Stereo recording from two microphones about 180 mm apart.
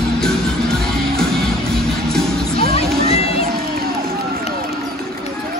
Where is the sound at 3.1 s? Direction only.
35° left (ahead or behind).